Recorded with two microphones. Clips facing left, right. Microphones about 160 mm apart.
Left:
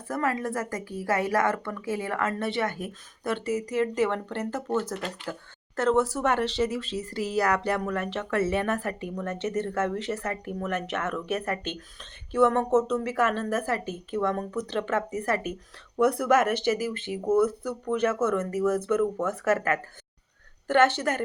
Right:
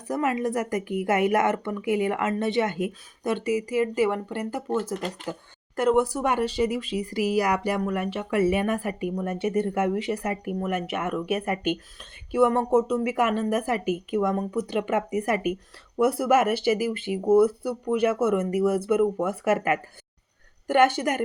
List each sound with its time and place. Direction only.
0.1 s speech: 20° right (ahead or behind)